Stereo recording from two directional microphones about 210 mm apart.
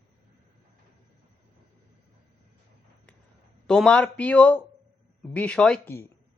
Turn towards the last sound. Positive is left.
turn(degrees=5)  # may be behind; listen again after turning